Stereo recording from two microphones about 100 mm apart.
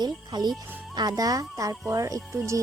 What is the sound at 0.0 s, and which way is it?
Speech, 45° right (ahead or behind).